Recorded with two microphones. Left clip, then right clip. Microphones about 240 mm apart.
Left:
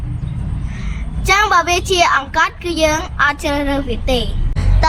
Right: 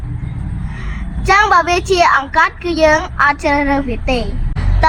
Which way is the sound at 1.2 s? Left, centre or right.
Right.